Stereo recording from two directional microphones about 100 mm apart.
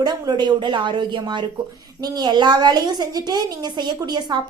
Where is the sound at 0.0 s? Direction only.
40° right (ahead or behind).